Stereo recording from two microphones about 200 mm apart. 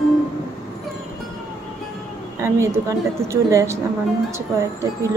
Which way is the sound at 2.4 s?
15° right (ahead or behind).